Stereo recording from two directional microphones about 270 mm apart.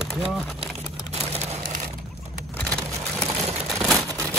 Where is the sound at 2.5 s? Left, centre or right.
Centre.